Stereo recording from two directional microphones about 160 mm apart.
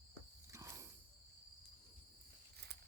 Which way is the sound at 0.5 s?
20° right (ahead or behind).